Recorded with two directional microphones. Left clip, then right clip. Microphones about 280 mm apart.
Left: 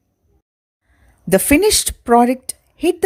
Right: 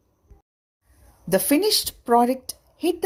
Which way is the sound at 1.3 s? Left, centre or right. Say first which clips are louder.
Left 7 dB; left.